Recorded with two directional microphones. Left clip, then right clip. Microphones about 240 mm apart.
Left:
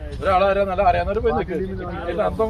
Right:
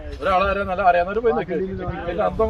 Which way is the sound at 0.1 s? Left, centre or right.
Centre.